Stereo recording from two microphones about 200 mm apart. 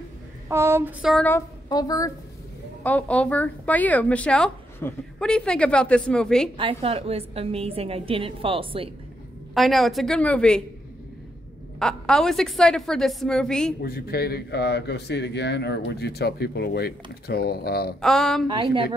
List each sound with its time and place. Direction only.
0.5 s a sound: 15° right (ahead or behind)
1.0 s a woman's voice: 5° left (ahead or behind)
1.7 s speech: 20° left (ahead or behind); by 6.5 s 5° left (ahead or behind)
6.5 s a woman's voice: 25° right (ahead or behind)
9.5 s a woman's voice: centre (ahead or behind)
11.8 s a woman's voice: 5° left (ahead or behind)
13.8 s a man's voice: 50° left (ahead or behind)
18.0 s a woman's voice: centre (ahead or behind)
18.5 s a woman's voice: 25° right (ahead or behind)